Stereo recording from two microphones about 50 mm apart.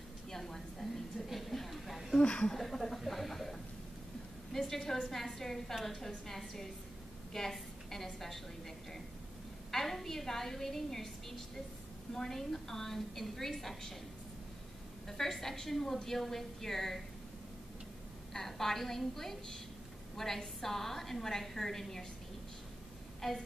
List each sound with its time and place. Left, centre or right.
0.3 s a sound: centre
2.2 s speech: left
2.5 s a sound: centre
4.5 s a woman's voice: centre
15.0 s a woman's voice: centre
18.3 s a woman's voice: centre
23.2 s a woman's voice: centre